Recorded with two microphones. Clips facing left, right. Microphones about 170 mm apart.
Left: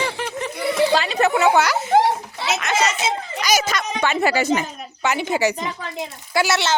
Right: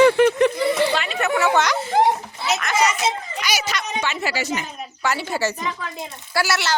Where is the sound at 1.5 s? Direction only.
5° left (ahead or behind).